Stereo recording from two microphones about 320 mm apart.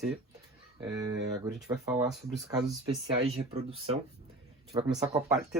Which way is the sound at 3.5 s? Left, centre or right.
Centre.